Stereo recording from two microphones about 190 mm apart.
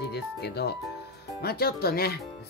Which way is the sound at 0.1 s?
60° left (ahead or behind).